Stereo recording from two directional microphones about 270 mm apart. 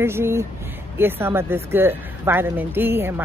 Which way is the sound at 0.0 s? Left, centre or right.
Centre.